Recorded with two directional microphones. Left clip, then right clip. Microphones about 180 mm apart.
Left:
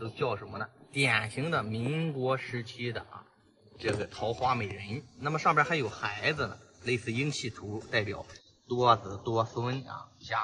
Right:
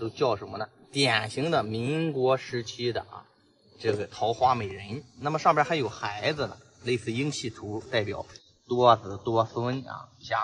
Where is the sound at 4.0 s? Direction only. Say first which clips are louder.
Right 5 dB; 60° right (ahead or behind).